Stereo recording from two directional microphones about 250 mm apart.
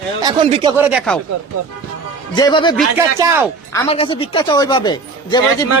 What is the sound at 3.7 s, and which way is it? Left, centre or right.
Speech, left.